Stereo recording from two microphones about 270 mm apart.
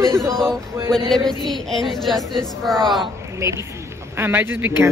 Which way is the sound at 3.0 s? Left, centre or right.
Centre.